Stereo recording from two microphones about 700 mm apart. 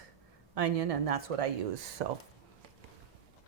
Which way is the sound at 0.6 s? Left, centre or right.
Right.